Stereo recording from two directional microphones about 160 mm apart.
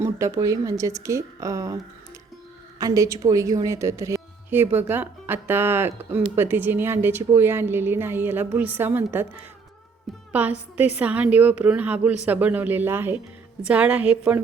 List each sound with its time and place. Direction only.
0.0 s a woman's voice: 20° right (ahead or behind)
10.3 s a woman's voice: 10° right (ahead or behind)